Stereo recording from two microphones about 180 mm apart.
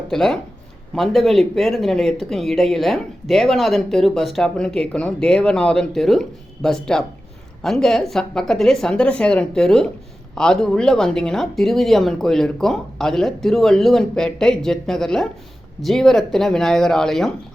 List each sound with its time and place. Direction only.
0.1 s speech: centre (ahead or behind)